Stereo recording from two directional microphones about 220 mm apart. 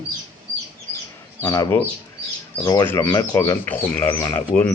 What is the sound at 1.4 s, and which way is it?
Speech, 15° left (ahead or behind).